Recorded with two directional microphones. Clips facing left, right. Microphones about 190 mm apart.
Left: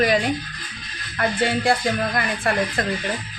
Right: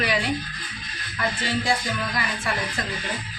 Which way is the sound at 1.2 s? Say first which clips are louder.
Left 5 dB; 55° left (ahead or behind).